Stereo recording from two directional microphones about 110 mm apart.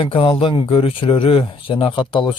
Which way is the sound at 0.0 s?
55° left (ahead or behind).